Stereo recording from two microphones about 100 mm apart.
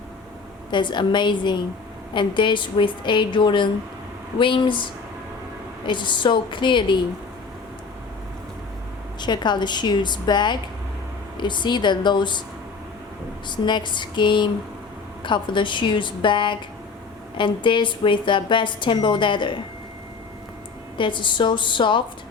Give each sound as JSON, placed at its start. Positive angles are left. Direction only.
{"t": 0.7, "sound": "a woman's voice", "side_deg": 50}
{"t": 9.2, "sound": "a woman's voice", "side_deg": 50}
{"t": 13.5, "sound": "a woman's voice", "side_deg": 50}
{"t": 21.0, "sound": "a woman's voice", "side_deg": 55}